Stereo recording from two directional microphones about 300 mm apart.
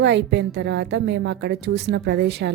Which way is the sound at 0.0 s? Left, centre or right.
Right.